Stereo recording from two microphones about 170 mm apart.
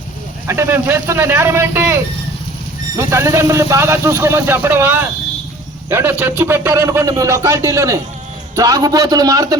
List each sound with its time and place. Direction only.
0.4 s speech: 15° right (ahead or behind)